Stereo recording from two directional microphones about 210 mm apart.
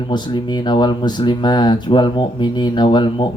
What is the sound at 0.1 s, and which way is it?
A man's voice, 20° left (ahead or behind).